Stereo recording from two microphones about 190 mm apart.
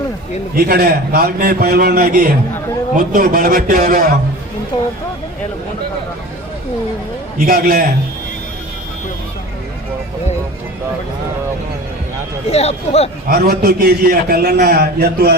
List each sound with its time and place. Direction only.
0.5 s a man's voice: 55° right (ahead or behind)
4.7 s speech: 25° left (ahead or behind)
7.3 s a man's voice: 50° right (ahead or behind)
12.5 s speech: 35° left (ahead or behind)
13.2 s a man's voice: 50° right (ahead or behind)